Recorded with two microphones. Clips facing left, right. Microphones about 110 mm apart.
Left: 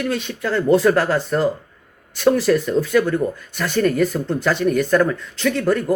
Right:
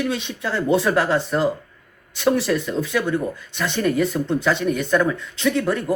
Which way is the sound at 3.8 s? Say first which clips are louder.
Left 3 dB; 10° right (ahead or behind).